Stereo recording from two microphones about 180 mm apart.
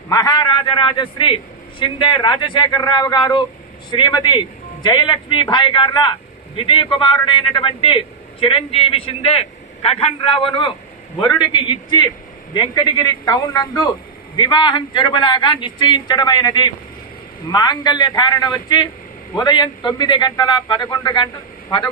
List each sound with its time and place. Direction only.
0.1 s a man's voice: 20° left (ahead or behind)
11.2 s a man's voice: 25° left (ahead or behind)